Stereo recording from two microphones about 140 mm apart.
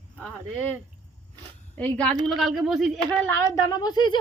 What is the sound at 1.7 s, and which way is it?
A woman's voice, 10° left (ahead or behind).